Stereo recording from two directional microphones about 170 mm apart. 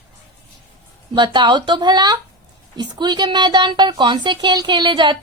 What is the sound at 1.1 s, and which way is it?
A woman's voice, 25° right (ahead or behind).